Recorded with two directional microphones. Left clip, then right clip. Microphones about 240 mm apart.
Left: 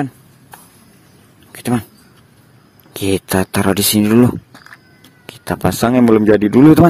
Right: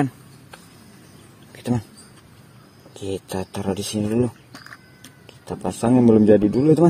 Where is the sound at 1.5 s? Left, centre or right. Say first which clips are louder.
Left 7 dB; left.